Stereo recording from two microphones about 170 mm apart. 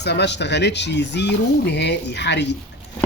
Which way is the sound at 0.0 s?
85° left.